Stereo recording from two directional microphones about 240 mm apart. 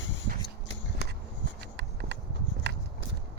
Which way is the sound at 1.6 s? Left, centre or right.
Right.